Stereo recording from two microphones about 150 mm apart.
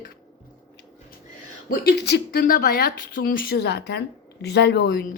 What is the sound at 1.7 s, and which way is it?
Speech, 90° left.